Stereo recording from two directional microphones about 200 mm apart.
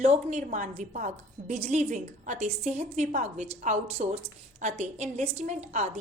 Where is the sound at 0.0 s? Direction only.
35° right (ahead or behind).